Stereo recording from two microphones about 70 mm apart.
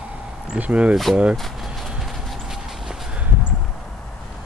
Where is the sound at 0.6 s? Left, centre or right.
Centre.